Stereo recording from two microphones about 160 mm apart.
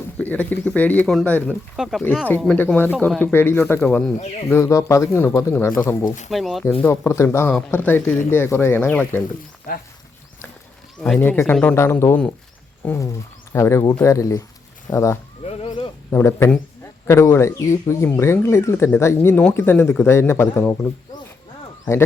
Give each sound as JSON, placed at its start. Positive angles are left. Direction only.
{"t": 0.2, "sound": "speech", "side_deg": 10}
{"t": 1.7, "sound": "speech", "side_deg": 0}
{"t": 2.6, "sound": "speech", "side_deg": 10}
{"t": 6.3, "sound": "speech", "side_deg": 0}
{"t": 6.8, "sound": "speech", "side_deg": 15}
{"t": 9.7, "sound": "speech", "side_deg": 65}
{"t": 11.2, "sound": "speech", "side_deg": 10}
{"t": 15.4, "sound": "a sound", "side_deg": 40}
{"t": 16.1, "sound": "speech", "side_deg": 15}